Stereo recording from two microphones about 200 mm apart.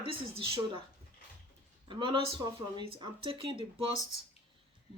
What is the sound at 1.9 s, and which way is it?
Speech, 25° right (ahead or behind).